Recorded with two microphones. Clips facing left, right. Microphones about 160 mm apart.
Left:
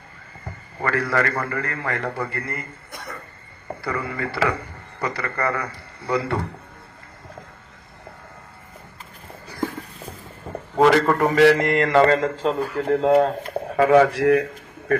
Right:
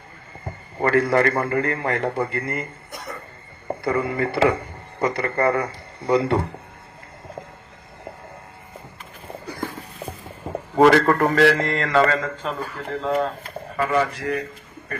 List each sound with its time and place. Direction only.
0.4 s a man's voice: 25° right (ahead or behind)
3.7 s speech: 25° right (ahead or behind)
10.8 s a man's voice: centre (ahead or behind); by 12.3 s 25° left (ahead or behind)
12.9 s speech: 50° left (ahead or behind)
13.7 s speech: 75° left (ahead or behind)